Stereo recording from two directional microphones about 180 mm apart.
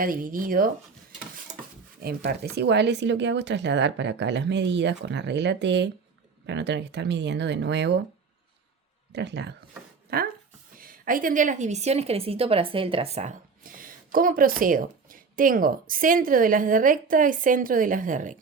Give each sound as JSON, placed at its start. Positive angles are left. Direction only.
{"t": 0.0, "sound": "a woman's voice", "side_deg": -50}
{"t": 2.0, "sound": "speech", "side_deg": -60}
{"t": 9.1, "sound": "speech", "side_deg": -70}
{"t": 10.1, "sound": "a woman's voice", "side_deg": -60}